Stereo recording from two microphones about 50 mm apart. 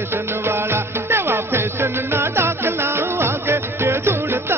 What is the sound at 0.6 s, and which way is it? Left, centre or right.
Music, right.